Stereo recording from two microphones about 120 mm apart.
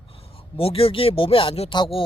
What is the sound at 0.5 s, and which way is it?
Speech, 50° left (ahead or behind).